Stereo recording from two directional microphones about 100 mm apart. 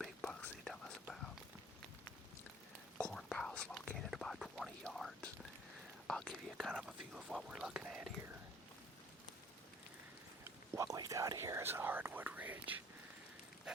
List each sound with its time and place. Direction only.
0.0 s whispering: 10° left (ahead or behind)
3.0 s whispering: 5° left (ahead or behind)
10.7 s whispering: 35° right (ahead or behind); by 12.8 s 15° right (ahead or behind)
13.7 s a sound: 5° right (ahead or behind)